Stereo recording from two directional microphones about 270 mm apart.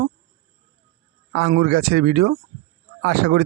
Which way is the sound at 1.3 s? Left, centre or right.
Right.